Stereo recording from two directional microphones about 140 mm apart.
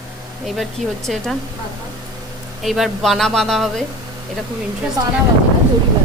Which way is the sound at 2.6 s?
Centre (ahead or behind).